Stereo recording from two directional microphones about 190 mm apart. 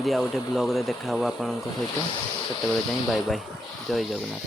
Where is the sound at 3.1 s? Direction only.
Centre (ahead or behind).